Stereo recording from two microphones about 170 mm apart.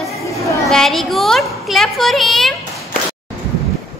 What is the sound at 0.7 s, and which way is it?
A child's voice, centre (ahead or behind).